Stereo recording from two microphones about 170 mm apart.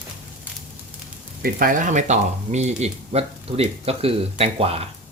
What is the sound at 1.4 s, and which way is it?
Speech, 55° right (ahead or behind).